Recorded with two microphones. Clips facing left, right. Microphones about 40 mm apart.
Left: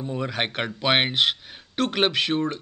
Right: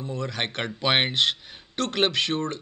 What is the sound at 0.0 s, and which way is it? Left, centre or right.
Speech, centre.